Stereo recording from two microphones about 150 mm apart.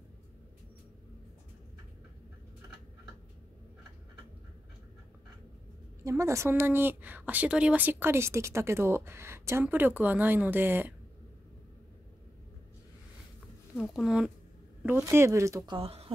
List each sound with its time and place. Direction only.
6.0 s a woman's voice: 20° right (ahead or behind)
13.7 s speech: 5° right (ahead or behind); by 16.1 s 40° right (ahead or behind)